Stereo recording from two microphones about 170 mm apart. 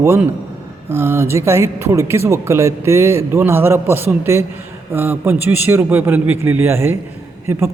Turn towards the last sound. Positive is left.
turn(degrees=-15)  # may be behind; listen again after turning